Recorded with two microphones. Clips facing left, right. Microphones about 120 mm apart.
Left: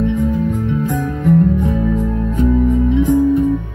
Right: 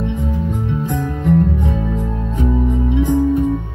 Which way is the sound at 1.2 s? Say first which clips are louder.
Left 3 dB; 20° right (ahead or behind).